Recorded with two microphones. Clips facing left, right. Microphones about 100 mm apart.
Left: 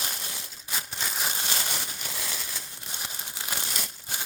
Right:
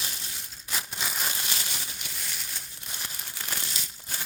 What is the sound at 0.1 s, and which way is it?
Crushing, 65° left (ahead or behind).